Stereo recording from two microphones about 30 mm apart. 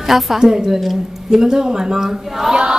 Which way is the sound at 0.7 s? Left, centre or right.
Centre.